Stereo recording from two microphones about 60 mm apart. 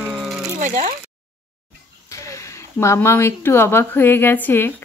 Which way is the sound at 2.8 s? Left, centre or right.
Left.